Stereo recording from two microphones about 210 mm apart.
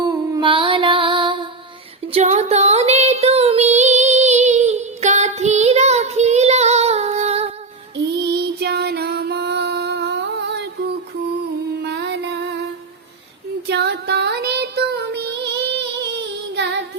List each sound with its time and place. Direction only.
0.0 s music: 20° right (ahead or behind)
2.1 s child singing: 30° right (ahead or behind)
7.9 s female singing: 50° right (ahead or behind)
11.8 s music: 50° right (ahead or behind)
13.7 s music: 55° right (ahead or behind)